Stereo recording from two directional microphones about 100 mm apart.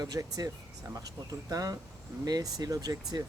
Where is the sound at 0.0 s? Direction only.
40° right (ahead or behind).